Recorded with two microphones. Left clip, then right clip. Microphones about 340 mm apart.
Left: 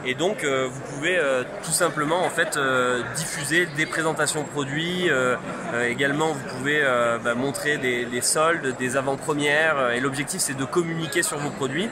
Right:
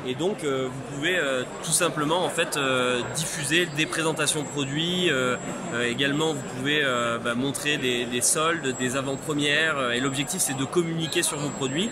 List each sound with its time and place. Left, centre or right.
0.2 s speech: centre
1.0 s speech: centre